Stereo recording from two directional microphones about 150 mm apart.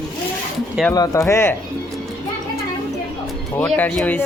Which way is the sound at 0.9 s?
20° left (ahead or behind).